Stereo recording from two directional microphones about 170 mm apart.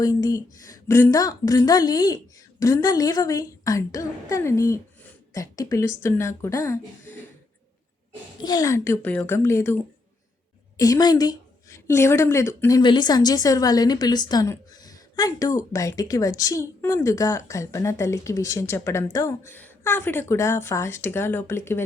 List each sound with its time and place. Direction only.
0.0 s a woman's voice: 20° left (ahead or behind)
8.4 s a woman's voice: 25° left (ahead or behind)
10.8 s a woman's voice: 20° left (ahead or behind)